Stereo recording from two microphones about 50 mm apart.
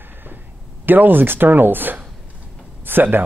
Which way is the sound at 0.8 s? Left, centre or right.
Right.